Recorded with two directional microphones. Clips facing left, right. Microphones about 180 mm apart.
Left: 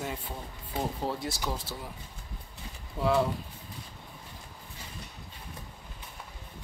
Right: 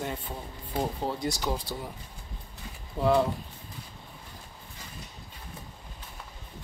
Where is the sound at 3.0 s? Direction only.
25° right (ahead or behind).